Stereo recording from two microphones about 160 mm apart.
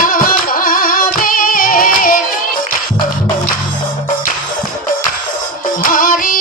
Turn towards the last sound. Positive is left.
turn(degrees=60)  # may be behind; listen again after turning